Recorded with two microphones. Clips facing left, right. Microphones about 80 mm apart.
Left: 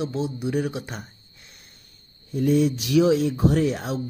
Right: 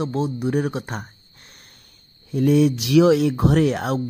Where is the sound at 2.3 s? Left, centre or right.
Right.